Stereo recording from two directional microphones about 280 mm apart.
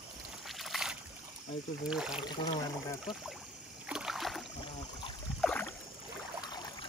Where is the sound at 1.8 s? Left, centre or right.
Centre.